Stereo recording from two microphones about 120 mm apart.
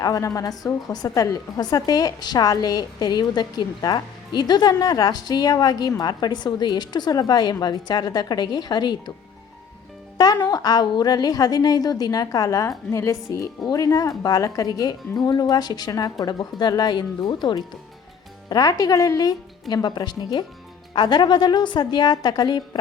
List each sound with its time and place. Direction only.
0.0 s a woman's voice: 30° left (ahead or behind)
10.4 s a woman's voice: 35° left (ahead or behind)